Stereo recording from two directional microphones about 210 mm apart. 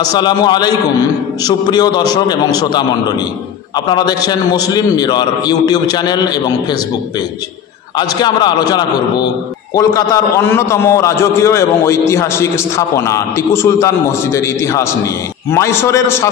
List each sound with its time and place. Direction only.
0.1 s a man's voice: 20° left (ahead or behind)
8.2 s a man's voice: 20° left (ahead or behind)